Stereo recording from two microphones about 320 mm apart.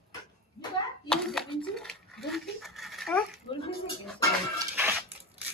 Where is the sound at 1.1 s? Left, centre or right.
Centre.